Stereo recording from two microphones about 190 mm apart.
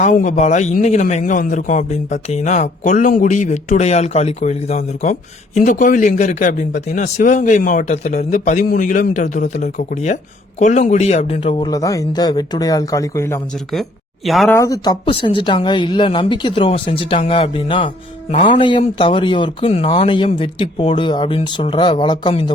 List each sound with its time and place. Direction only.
0.0 s a man's voice: 40° left (ahead or behind)
11.7 s speech: 15° left (ahead or behind)
14.3 s speech: centre (ahead or behind)
14.5 s speech: 20° left (ahead or behind)